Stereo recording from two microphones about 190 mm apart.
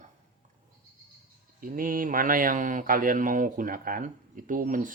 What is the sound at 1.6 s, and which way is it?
Speech, 45° right (ahead or behind).